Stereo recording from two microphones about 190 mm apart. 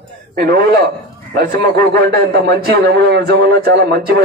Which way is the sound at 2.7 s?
60° right (ahead or behind).